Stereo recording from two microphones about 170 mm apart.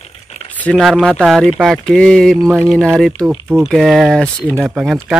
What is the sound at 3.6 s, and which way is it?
Speech, centre (ahead or behind).